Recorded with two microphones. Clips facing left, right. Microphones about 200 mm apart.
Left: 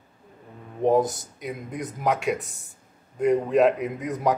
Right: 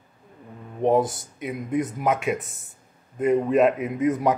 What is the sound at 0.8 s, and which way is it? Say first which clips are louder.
Speech: even; centre (ahead or behind).